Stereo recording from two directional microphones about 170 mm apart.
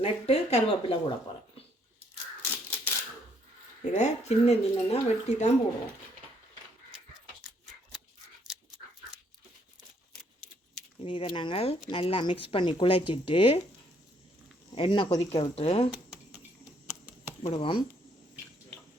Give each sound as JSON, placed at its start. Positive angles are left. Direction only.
{"t": 0.0, "sound": "speech", "side_deg": 35}
{"t": 2.4, "sound": "scissors", "side_deg": 15}
{"t": 3.9, "sound": "speech", "side_deg": 40}
{"t": 11.0, "sound": "speech", "side_deg": 30}
{"t": 14.8, "sound": "speech", "side_deg": 30}
{"t": 15.5, "sound": "speech", "side_deg": 35}
{"t": 15.9, "sound": "a sound", "side_deg": -10}
{"t": 17.4, "sound": "speech", "side_deg": 30}